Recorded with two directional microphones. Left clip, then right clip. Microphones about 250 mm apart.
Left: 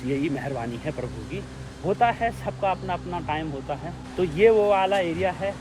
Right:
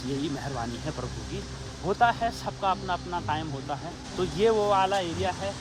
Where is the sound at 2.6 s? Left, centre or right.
Centre.